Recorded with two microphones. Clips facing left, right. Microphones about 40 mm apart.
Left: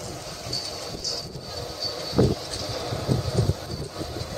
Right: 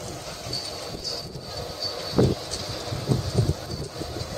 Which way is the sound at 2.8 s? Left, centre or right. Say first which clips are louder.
Left 2 dB; centre.